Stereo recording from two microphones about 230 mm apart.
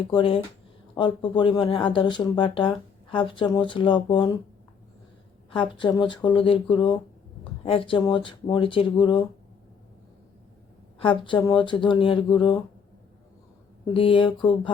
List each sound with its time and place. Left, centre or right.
0.1 s speech: left
5.5 s speech: left
11.0 s speech: left
13.9 s speech: left